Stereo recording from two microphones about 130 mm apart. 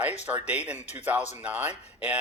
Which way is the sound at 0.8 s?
60° left (ahead or behind).